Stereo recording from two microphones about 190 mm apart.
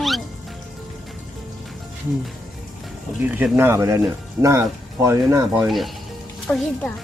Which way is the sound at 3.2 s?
10° right (ahead or behind).